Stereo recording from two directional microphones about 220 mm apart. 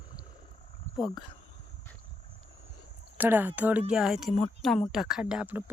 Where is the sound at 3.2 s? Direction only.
10° right (ahead or behind).